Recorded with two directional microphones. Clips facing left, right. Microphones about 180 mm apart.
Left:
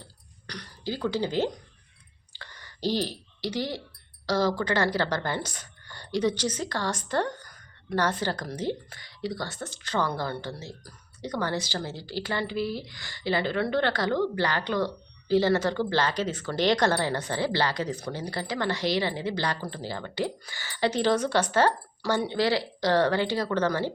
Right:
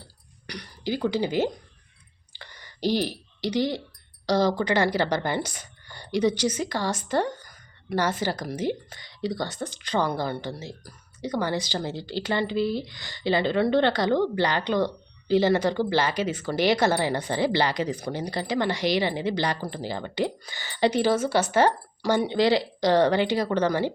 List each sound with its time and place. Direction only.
0.4 s speech: 10° right (ahead or behind)
2.3 s clicking: 15° right (ahead or behind)
4.3 s a woman's voice: 20° right (ahead or behind)